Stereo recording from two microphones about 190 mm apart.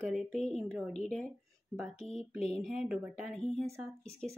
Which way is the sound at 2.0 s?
35° left (ahead or behind).